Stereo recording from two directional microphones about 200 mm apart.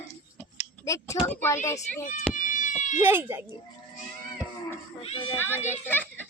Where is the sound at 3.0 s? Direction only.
10° right (ahead or behind).